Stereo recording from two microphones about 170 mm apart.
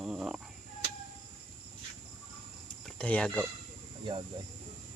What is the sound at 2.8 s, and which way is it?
Speech, 5° left (ahead or behind).